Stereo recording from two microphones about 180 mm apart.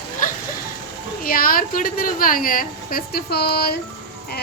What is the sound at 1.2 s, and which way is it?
A woman's voice, 50° left (ahead or behind).